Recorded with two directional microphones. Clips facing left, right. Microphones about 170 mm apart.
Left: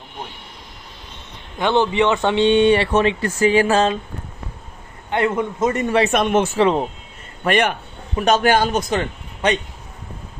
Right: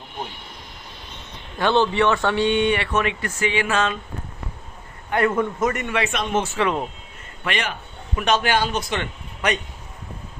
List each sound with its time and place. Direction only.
1.5 s speech: 15° left (ahead or behind); by 3.9 s 35° left (ahead or behind)
5.1 s speech: 20° left (ahead or behind)
6.1 s speech: 60° left (ahead or behind)
6.6 s speech: 30° left (ahead or behind)
7.4 s a man's voice: 55° left (ahead or behind)
8.1 s a man's voice: 40° left (ahead or behind)